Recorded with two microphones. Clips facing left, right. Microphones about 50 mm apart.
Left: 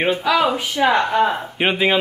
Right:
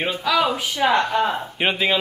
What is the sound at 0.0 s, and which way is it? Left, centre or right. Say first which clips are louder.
Speech: left 3 dB; left.